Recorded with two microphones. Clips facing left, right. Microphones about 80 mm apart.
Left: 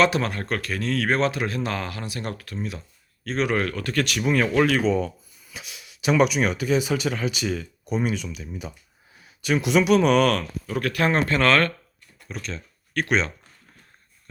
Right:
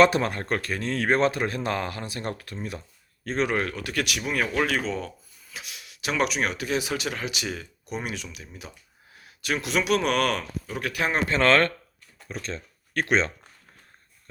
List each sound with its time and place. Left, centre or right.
0.3 s speech: right
3.5 s speech: centre
11.3 s speech: right